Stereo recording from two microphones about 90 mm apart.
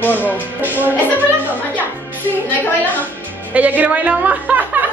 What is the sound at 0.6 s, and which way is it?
Music, 20° right (ahead or behind).